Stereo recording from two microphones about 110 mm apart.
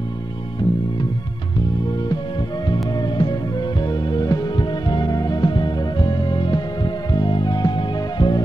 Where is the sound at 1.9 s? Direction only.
40° left (ahead or behind).